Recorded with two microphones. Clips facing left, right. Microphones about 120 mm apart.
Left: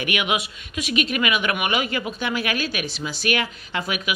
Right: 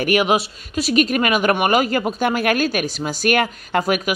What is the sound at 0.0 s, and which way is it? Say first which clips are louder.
A woman's voice: right 7 dB; 35° right (ahead or behind).